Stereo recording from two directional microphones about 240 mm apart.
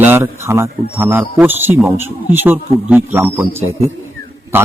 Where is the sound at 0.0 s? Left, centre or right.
Centre.